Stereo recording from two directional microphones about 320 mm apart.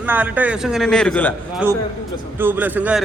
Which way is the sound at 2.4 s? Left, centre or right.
Centre.